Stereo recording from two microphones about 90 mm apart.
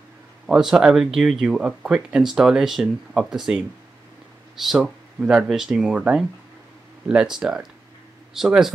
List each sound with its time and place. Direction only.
0.5 s speech: 5° right (ahead or behind)